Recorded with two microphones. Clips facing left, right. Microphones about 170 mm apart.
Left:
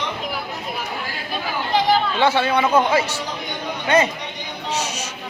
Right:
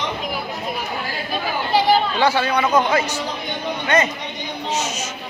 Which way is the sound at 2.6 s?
10° left (ahead or behind).